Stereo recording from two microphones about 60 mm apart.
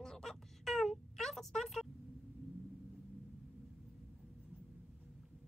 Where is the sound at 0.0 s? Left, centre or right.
Centre.